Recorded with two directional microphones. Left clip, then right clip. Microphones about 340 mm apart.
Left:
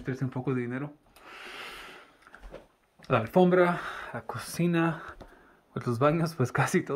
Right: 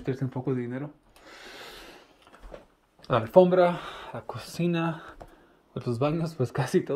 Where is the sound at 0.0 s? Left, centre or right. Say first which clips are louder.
Right 2 dB; centre.